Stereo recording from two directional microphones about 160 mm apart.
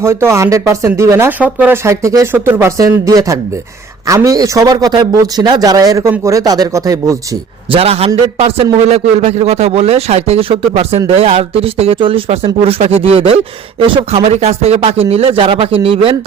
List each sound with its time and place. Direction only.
0.0 s speech: 15° right (ahead or behind)
7.7 s speech: 40° right (ahead or behind)